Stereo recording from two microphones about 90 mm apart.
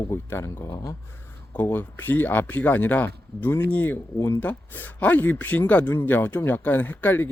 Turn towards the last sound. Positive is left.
turn(degrees=20)  # may be behind; listen again after turning